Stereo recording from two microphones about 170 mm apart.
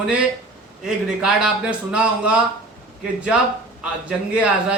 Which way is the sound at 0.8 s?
5° right (ahead or behind).